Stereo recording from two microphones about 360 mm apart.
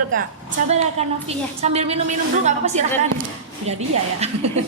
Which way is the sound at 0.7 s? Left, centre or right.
Centre.